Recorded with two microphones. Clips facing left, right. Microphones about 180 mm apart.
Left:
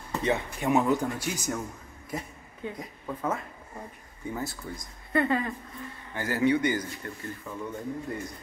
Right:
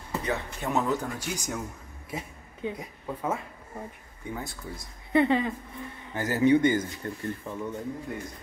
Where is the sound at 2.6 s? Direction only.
15° right (ahead or behind).